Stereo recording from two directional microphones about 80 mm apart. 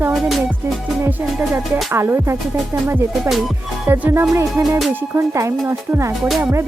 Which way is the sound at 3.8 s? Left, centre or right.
Right.